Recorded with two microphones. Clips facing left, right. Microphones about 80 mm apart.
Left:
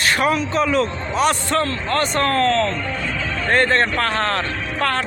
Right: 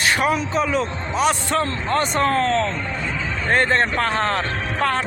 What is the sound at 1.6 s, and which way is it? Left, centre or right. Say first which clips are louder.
Speech: left 1 dB; centre.